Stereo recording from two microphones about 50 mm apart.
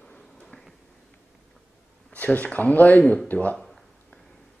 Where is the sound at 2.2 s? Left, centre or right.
Left.